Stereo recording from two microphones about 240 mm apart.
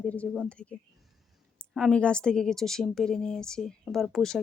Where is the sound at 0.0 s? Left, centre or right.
Centre.